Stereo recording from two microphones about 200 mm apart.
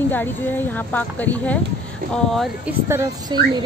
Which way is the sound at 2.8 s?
15° right (ahead or behind).